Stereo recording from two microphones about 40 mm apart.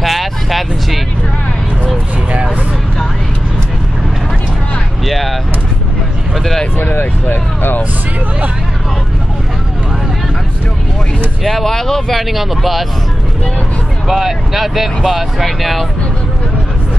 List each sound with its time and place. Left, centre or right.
0.0 s music: centre
5.0 s vehicle: centre
6.8 s vehicle: left
11.4 s speech: centre
12.2 s speech: centre
14.0 s speech: centre